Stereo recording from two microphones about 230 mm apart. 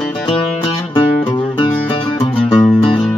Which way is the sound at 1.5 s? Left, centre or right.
Left.